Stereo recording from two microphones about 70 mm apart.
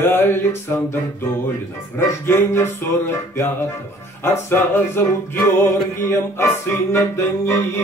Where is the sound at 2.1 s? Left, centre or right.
Left.